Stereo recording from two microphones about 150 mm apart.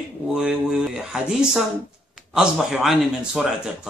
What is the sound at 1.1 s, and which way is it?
A man's voice, centre (ahead or behind).